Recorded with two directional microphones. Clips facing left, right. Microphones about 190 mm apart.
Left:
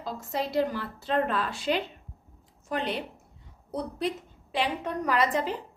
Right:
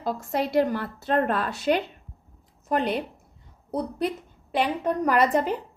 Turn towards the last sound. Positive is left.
turn(degrees=-50)  # may be behind; listen again after turning